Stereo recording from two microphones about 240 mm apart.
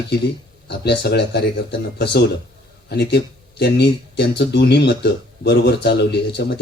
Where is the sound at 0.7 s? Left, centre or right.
Left.